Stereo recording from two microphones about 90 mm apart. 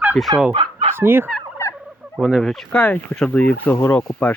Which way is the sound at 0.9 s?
25° right (ahead or behind).